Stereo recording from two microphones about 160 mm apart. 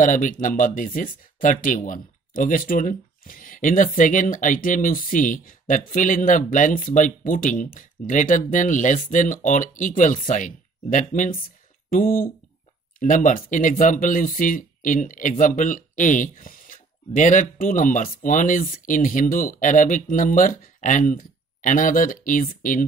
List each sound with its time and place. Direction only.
0.0 s speech: 55° left (ahead or behind)